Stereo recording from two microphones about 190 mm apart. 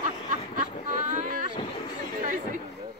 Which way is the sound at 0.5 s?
40° right (ahead or behind).